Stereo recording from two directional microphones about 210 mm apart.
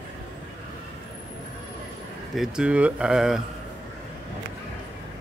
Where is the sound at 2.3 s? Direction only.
5° right (ahead or behind).